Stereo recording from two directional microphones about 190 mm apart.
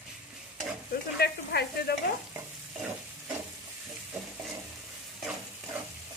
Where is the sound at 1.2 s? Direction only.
55° left (ahead or behind).